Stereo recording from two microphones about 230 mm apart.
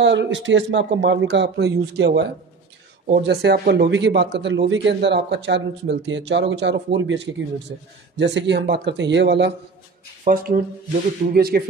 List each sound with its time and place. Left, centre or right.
0.0 s a man's voice: right
10.2 s speech: right